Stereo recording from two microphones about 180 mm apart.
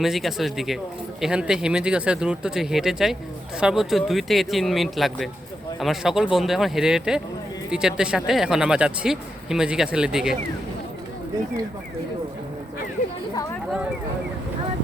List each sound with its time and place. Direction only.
0.0 s speech: centre (ahead or behind)